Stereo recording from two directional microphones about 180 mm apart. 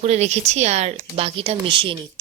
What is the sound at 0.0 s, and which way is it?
Speech, 40° right (ahead or behind).